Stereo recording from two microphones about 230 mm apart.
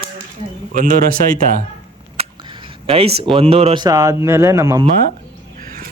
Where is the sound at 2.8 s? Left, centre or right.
Right.